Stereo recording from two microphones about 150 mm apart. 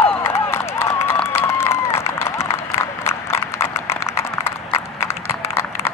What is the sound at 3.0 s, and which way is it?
Clip-clop, 15° left (ahead or behind).